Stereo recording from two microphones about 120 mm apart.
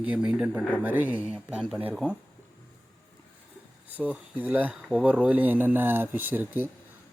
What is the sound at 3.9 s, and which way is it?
Speech, 10° right (ahead or behind).